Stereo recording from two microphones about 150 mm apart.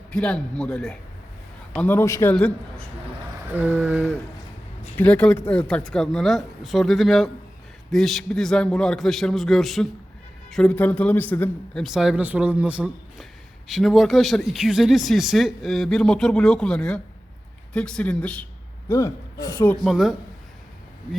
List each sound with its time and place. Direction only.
0.1 s speech: 5° left (ahead or behind)
2.3 s speech: 5° left (ahead or behind)
3.5 s speech: 15° right (ahead or behind)
4.9 s speech: 10° left (ahead or behind)
11.8 s speech: centre (ahead or behind)
18.9 s speech: 20° left (ahead or behind)
19.8 s speech: centre (ahead or behind)